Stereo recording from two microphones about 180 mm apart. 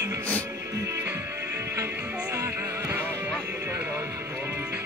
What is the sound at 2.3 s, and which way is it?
Music, 15° right (ahead or behind).